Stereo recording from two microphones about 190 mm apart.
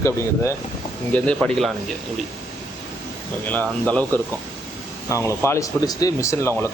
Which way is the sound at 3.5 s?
10° left (ahead or behind).